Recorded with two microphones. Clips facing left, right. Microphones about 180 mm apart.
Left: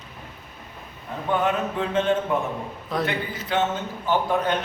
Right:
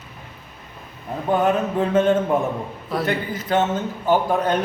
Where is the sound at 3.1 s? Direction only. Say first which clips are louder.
Right 5 dB; 45° right (ahead or behind).